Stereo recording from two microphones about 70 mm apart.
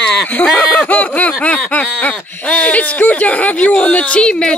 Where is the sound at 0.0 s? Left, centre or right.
Centre.